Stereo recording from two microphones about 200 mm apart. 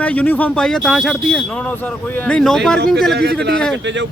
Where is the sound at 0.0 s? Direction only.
5° left (ahead or behind).